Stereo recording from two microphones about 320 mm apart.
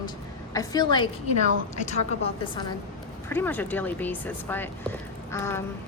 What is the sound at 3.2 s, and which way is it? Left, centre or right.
Speech, centre.